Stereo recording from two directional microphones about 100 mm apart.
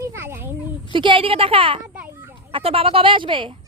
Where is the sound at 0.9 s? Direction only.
55° right (ahead or behind).